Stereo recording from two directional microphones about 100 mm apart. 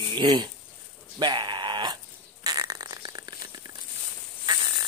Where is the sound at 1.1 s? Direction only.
50° right (ahead or behind).